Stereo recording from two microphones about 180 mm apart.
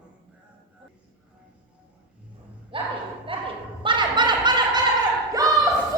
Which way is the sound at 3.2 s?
30° right (ahead or behind).